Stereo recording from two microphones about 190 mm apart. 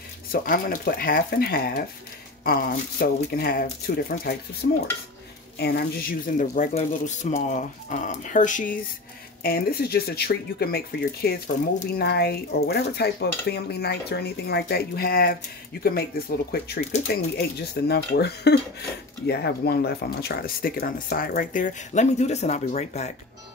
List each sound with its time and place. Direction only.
0.3 s speech: 50° left (ahead or behind)
9.4 s speech: 50° left (ahead or behind); by 23.1 s 35° left (ahead or behind)